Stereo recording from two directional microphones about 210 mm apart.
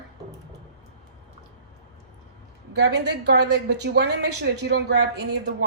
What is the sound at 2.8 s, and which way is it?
A woman's voice, 55° right (ahead or behind).